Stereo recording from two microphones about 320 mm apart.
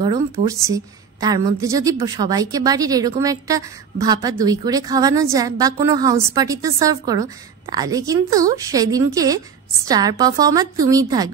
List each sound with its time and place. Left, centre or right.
0.0 s a woman's voice: centre